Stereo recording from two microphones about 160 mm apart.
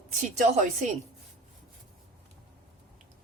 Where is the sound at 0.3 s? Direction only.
50° right (ahead or behind).